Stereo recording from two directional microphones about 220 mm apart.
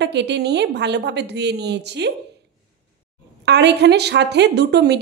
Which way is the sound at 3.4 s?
50° right (ahead or behind).